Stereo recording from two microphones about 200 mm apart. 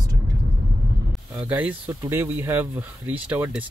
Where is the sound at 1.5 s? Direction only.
10° right (ahead or behind).